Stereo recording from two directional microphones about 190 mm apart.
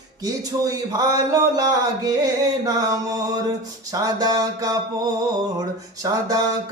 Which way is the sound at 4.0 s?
20° right (ahead or behind).